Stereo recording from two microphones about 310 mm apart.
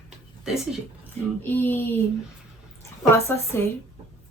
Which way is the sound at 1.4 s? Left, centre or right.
Centre.